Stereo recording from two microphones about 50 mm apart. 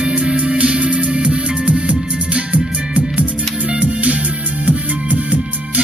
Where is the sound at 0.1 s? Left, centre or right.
Right.